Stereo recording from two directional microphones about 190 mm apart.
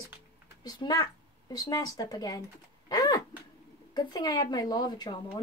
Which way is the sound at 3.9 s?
20° left (ahead or behind).